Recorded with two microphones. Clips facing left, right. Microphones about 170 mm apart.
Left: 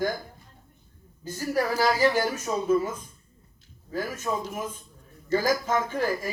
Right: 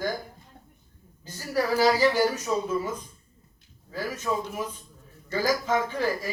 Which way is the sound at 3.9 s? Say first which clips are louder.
Even; 50° left (ahead or behind).